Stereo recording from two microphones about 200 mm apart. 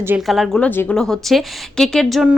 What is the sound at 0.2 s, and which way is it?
A woman's voice, centre (ahead or behind).